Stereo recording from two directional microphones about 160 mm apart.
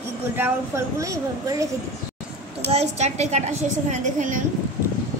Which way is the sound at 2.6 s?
40° right (ahead or behind).